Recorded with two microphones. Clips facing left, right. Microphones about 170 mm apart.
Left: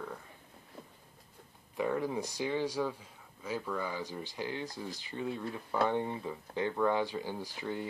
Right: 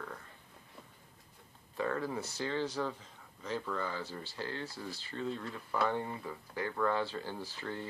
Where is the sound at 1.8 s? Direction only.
15° left (ahead or behind).